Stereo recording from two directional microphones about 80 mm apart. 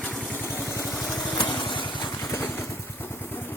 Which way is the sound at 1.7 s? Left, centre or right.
Left.